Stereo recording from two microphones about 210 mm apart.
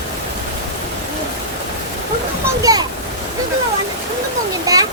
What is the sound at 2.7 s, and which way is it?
Speech, 15° right (ahead or behind).